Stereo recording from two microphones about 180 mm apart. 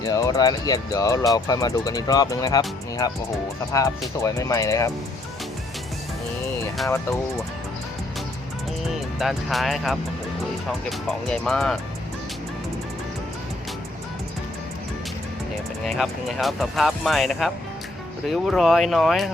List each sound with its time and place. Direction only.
0.0 s speech: 20° left (ahead or behind)
6.8 s speech: 15° left (ahead or behind)
9.1 s speech: centre (ahead or behind)
15.9 s speech: centre (ahead or behind)